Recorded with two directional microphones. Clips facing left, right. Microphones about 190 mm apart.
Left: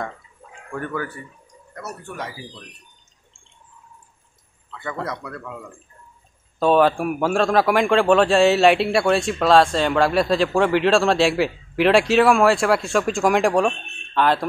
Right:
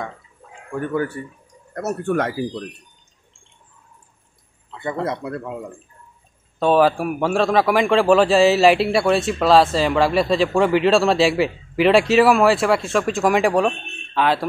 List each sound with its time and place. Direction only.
0.7 s speech: 15° right (ahead or behind)
1.7 s speech: 50° right (ahead or behind)
4.6 s speech: 25° right (ahead or behind)
6.6 s a man's voice: centre (ahead or behind)